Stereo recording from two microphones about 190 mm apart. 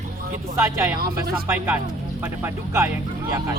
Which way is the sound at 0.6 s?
15° right (ahead or behind).